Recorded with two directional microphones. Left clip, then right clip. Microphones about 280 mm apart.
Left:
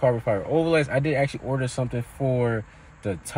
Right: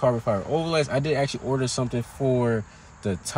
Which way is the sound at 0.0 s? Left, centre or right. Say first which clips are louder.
Left 1 dB; centre.